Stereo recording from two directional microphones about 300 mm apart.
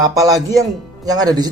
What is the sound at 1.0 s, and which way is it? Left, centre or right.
Speech, centre.